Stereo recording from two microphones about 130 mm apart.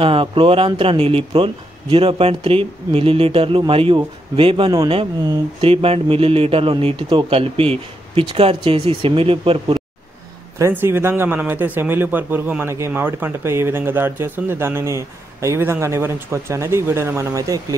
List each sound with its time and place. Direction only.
0.0 s speech: 45° right (ahead or behind)
10.6 s a man's voice: 20° right (ahead or behind)